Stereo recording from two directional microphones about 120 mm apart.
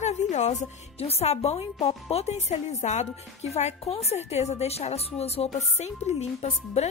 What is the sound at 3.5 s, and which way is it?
A woman's voice, 60° left (ahead or behind).